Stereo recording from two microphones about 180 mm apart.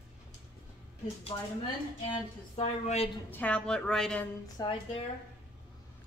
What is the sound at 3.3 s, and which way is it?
Speech, 5° left (ahead or behind).